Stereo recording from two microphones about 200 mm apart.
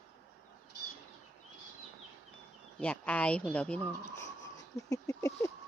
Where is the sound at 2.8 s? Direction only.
5° left (ahead or behind).